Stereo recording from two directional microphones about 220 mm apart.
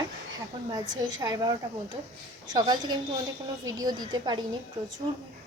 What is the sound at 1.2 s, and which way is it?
A woman's voice, 15° right (ahead or behind).